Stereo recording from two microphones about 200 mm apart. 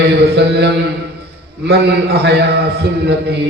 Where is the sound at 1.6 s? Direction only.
55° right (ahead or behind).